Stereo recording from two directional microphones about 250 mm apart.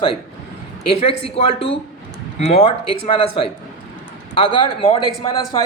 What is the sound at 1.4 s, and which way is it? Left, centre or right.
Speech, left.